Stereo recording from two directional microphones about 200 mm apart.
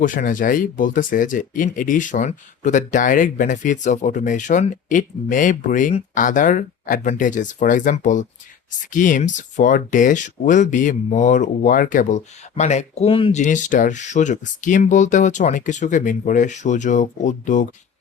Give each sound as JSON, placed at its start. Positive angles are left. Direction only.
{"t": 0.0, "sound": "speech", "side_deg": 40}
{"t": 13.4, "sound": "speech", "side_deg": 40}